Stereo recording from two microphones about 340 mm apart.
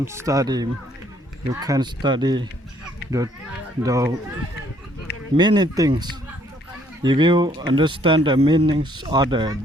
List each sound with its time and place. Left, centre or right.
0.0 s speech: centre
3.0 s a sound: left
3.8 s speech: centre
5.4 s speech: centre